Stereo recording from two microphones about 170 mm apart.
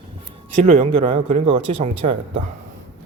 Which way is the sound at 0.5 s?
40° right (ahead or behind).